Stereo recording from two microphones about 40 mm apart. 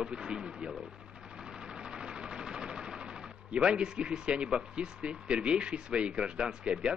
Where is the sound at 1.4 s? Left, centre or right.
Centre.